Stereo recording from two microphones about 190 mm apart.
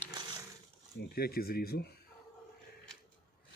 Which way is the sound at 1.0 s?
55° left (ahead or behind).